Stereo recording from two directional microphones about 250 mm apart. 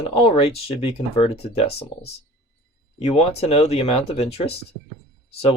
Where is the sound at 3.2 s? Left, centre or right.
Left.